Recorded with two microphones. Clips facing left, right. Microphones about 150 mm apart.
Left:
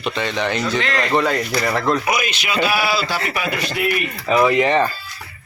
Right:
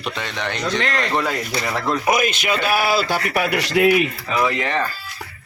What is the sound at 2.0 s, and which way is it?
A man's voice, 50° right (ahead or behind).